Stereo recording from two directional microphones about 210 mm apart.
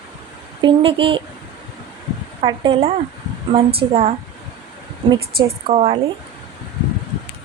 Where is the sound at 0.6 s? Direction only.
25° right (ahead or behind).